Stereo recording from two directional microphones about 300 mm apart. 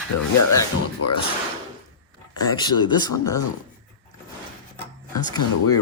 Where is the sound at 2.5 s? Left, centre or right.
Centre.